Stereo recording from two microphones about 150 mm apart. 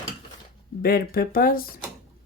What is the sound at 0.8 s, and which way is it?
Speech, 85° left.